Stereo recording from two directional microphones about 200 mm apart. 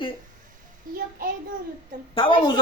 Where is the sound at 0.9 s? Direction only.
45° right (ahead or behind).